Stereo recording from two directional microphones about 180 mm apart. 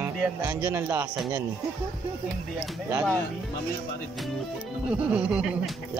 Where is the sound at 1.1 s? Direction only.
Centre (ahead or behind).